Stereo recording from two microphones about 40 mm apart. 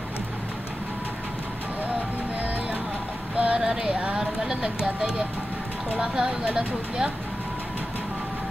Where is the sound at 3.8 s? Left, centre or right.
Right.